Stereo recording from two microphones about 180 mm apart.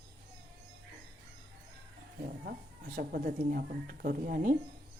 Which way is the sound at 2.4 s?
55° right (ahead or behind).